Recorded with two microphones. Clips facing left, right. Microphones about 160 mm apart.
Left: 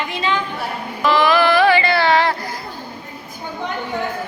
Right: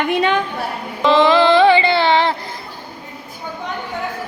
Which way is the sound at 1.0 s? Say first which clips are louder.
Right 3 dB; 20° right (ahead or behind).